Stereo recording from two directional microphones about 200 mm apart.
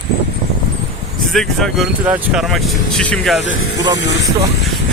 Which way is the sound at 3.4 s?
65° left (ahead or behind).